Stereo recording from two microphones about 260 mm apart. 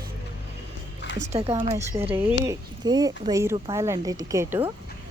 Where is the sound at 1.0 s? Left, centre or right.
Left.